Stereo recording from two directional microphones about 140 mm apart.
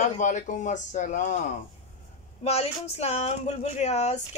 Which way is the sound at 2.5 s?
45° left (ahead or behind).